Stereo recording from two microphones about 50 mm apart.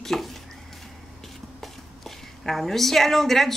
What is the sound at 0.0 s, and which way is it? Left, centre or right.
Stir, centre.